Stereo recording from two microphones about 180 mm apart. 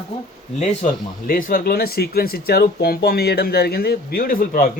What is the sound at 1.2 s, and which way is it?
Speech, 50° left (ahead or behind).